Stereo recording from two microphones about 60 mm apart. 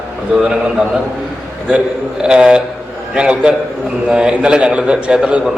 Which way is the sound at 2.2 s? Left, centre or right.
Centre.